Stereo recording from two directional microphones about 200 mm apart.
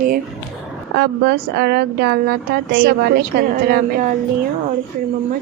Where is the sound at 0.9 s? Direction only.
55° right (ahead or behind).